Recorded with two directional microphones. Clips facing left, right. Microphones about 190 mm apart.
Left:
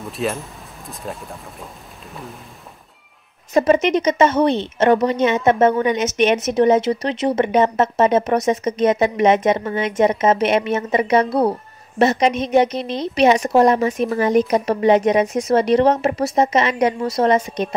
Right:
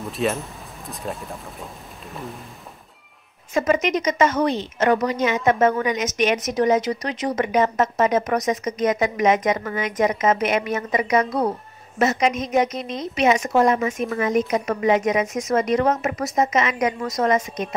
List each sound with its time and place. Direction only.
0.0 s speech: centre (ahead or behind)
3.5 s a woman's voice: 30° left (ahead or behind)